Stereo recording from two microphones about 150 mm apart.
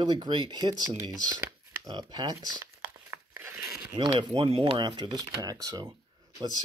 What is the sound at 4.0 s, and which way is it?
Speech, 35° right (ahead or behind).